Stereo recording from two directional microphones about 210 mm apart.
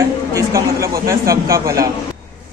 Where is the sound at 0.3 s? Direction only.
15° right (ahead or behind).